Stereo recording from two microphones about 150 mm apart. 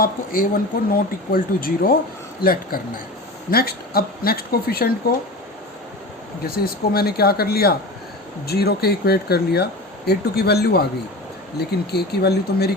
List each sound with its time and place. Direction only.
0.0 s speech: 70° left (ahead or behind); by 4.9 s 90° left
6.4 s speech: 90° left